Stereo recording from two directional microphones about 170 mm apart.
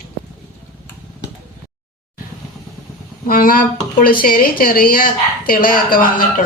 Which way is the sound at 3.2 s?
55° left (ahead or behind).